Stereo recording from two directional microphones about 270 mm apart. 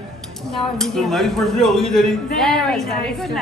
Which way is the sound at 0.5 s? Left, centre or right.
Centre.